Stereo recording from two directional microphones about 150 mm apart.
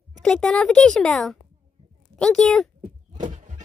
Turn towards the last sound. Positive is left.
turn(degrees=-55)  # may be behind; listen again after turning